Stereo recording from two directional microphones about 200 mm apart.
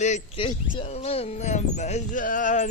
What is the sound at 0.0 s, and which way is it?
Speech, 35° left (ahead or behind).